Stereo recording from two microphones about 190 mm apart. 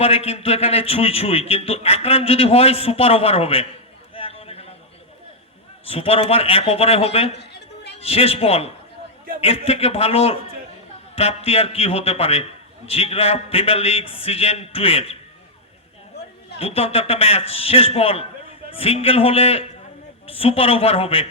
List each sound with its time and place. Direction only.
0.0 s a man's voice: 30° left (ahead or behind)
4.1 s a sound: 30° left (ahead or behind)
5.9 s a man's voice: 30° left (ahead or behind)
7.3 s a sound: 65° left (ahead or behind)
7.9 s a man's voice: 30° left (ahead or behind)
16.6 s a man's voice: 30° left (ahead or behind)